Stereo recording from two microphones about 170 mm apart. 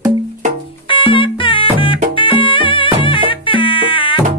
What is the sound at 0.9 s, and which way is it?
Music, 30° left (ahead or behind).